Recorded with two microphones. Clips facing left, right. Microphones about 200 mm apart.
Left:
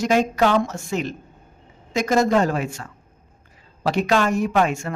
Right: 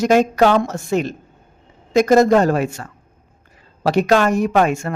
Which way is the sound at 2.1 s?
55° right (ahead or behind).